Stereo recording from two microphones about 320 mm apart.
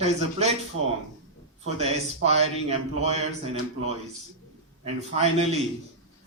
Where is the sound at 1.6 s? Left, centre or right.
Centre.